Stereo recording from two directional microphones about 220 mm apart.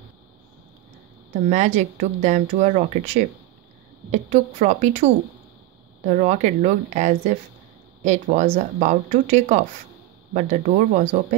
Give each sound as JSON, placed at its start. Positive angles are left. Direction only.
{"t": 1.5, "sound": "speech", "side_deg": -35}